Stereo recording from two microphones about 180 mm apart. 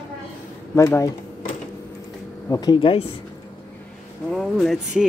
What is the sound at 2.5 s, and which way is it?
Speech, 20° left (ahead or behind).